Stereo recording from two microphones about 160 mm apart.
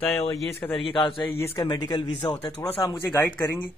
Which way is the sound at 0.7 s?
35° left (ahead or behind).